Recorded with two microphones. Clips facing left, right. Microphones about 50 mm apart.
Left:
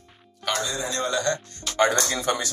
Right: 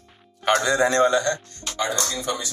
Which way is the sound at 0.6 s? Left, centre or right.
Right.